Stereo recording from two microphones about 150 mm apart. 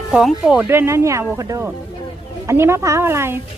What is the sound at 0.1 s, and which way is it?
Speech, 5° right (ahead or behind).